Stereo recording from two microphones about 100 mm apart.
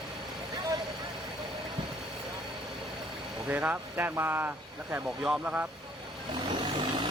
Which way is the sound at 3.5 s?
15° right (ahead or behind).